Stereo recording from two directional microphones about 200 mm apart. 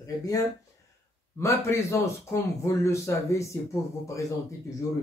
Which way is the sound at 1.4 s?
15° left (ahead or behind).